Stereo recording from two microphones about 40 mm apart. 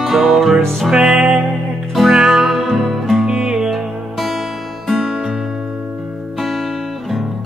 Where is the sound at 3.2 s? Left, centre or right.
Centre.